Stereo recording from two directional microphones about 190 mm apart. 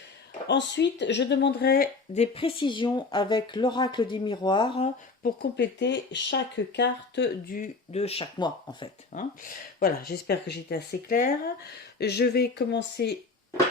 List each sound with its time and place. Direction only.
0.4 s speech: 65° left (ahead or behind)
2.1 s speech: 35° left (ahead or behind)
5.2 s speech: 60° left (ahead or behind)
7.5 s speech: 40° left (ahead or behind)
9.1 s speech: 50° left (ahead or behind)